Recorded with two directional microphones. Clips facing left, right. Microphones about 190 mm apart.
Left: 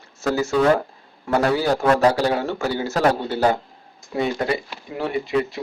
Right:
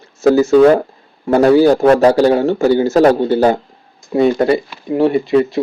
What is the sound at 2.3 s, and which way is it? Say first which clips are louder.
A man's voice: right 11 dB; 35° right (ahead or behind).